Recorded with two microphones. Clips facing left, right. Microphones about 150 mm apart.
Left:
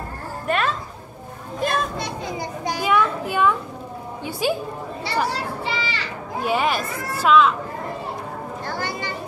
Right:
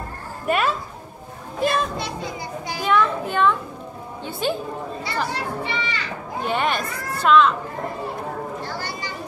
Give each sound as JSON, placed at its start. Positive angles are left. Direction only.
{"t": 0.5, "sound": "speech", "side_deg": -5}
{"t": 1.6, "sound": "children playing", "side_deg": -5}
{"t": 2.8, "sound": "a child's voice", "side_deg": 10}
{"t": 5.6, "sound": "a child's voice", "side_deg": 30}
{"t": 6.4, "sound": "speech", "side_deg": 5}
{"t": 8.6, "sound": "a sound", "side_deg": 50}